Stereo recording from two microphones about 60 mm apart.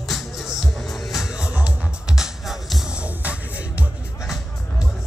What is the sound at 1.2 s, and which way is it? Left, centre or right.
Music, centre.